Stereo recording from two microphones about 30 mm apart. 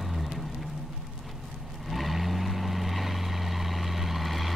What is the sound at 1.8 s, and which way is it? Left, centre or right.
Vehicle, centre.